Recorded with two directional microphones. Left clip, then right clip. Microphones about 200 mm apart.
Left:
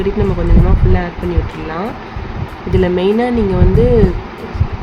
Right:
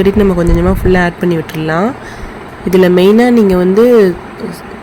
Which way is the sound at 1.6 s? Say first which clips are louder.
Right 10 dB; 35° right (ahead or behind).